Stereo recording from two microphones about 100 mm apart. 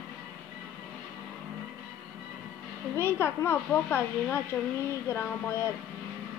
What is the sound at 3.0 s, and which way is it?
Speech, 25° left (ahead or behind).